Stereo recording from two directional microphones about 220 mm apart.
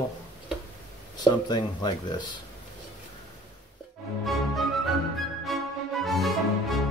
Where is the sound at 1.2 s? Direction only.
20° left (ahead or behind).